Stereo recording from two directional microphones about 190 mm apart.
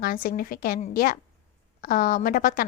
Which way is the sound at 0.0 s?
50° left (ahead or behind).